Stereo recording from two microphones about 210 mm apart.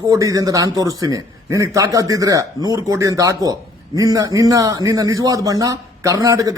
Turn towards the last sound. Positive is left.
turn(degrees=-15)  # may be behind; listen again after turning